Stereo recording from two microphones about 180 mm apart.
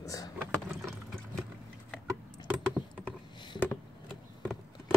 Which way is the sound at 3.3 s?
25° left (ahead or behind).